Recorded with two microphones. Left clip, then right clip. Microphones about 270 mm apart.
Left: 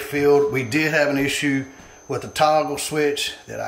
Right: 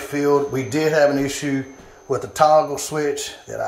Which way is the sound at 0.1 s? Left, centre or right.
Centre.